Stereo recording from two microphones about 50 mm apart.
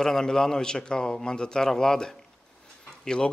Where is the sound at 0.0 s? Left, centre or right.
Centre.